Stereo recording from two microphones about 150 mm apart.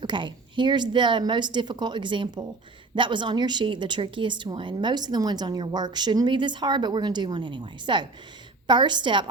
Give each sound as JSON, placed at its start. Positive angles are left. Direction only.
{"t": 0.0, "sound": "a woman's voice", "side_deg": -30}